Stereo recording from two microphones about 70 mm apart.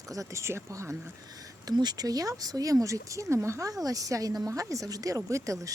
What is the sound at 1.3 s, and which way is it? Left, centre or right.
Speech, right.